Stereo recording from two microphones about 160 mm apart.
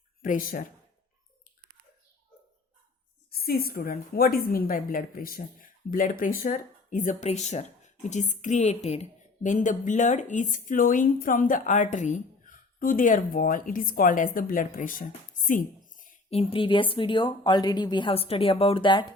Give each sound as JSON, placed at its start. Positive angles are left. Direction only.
{"t": 0.2, "sound": "speech", "side_deg": 60}
{"t": 3.3, "sound": "a woman's voice", "side_deg": 70}
{"t": 15.9, "sound": "music", "side_deg": 55}
{"t": 16.3, "sound": "speech", "side_deg": 35}